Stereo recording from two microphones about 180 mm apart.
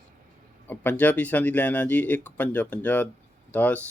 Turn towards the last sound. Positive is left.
turn(degrees=10)  # may be behind; listen again after turning